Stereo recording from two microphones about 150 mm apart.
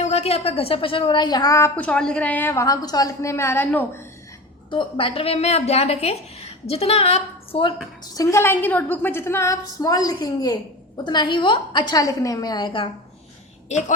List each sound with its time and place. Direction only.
0.0 s a woman's voice: 45° left (ahead or behind); by 4.0 s 15° left (ahead or behind)
4.7 s a woman's voice: 35° left (ahead or behind)
8.1 s a woman's voice: 20° left (ahead or behind)
13.7 s a woman's voice: 50° left (ahead or behind)